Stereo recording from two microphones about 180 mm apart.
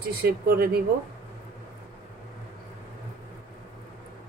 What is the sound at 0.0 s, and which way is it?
Speech, 55° right (ahead or behind).